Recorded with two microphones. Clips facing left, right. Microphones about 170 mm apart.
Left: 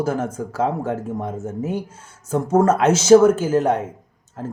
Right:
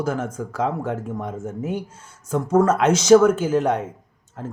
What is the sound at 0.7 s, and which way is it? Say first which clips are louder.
Speech: left 2 dB; 40° left (ahead or behind).